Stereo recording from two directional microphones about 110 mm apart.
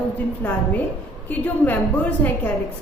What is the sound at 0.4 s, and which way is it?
A woman's voice, 10° left (ahead or behind).